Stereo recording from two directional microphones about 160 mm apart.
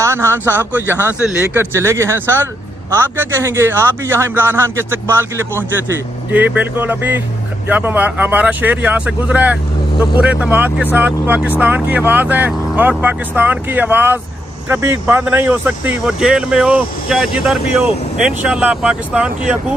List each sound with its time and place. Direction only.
0.0 s speech: 15° right (ahead or behind)